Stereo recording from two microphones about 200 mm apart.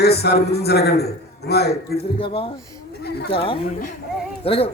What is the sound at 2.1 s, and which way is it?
Speech, 25° left (ahead or behind).